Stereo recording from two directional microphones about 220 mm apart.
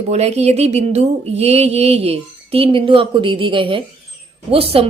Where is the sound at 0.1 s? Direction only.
30° right (ahead or behind).